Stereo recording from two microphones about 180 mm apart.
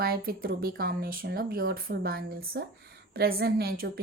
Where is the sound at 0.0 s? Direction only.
55° right (ahead or behind).